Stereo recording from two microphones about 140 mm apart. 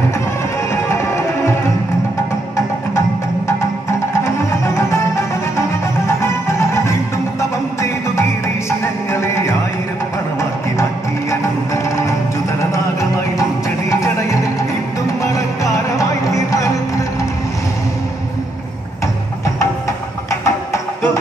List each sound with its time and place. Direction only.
0.8 s music: 20° left (ahead or behind)
4.2 s music: 20° left (ahead or behind)
10.8 s music: 20° left (ahead or behind)
13.4 s music: 25° left (ahead or behind)
15.2 s music: 20° left (ahead or behind)
20.2 s music: 20° left (ahead or behind)